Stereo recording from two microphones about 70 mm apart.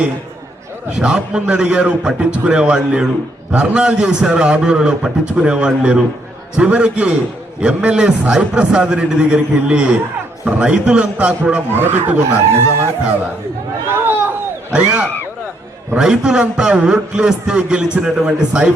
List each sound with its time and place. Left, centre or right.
0.9 s a man's voice: centre
11.7 s speech: right
12.5 s speech: right
13.9 s a sound: right
14.7 s a man's voice: centre